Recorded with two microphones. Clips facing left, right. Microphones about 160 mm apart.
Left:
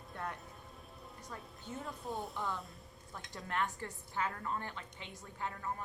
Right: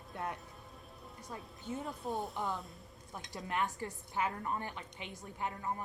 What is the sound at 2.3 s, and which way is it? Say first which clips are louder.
A woman's voice: right 2 dB; 20° right (ahead or behind).